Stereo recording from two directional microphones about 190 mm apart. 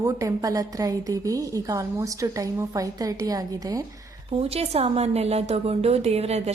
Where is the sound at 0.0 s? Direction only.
15° right (ahead or behind).